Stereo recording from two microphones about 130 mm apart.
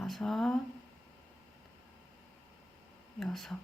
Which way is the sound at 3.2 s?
Centre (ahead or behind).